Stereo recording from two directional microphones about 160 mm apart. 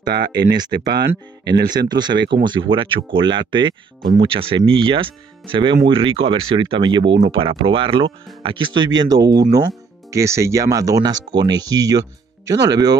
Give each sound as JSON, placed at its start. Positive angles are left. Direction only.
{"t": 0.1, "sound": "speech", "side_deg": -85}
{"t": 1.5, "sound": "speech", "side_deg": -25}